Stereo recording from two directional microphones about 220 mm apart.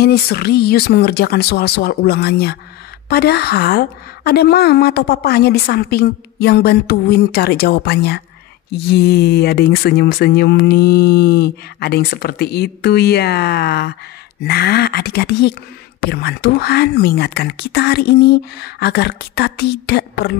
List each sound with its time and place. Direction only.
0.0 s speech: 45° left (ahead or behind)